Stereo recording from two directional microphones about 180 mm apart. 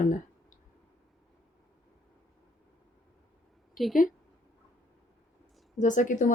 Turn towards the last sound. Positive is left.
turn(degrees=45)  # may be behind; listen again after turning